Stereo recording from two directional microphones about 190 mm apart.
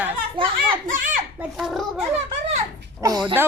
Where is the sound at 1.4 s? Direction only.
Centre (ahead or behind).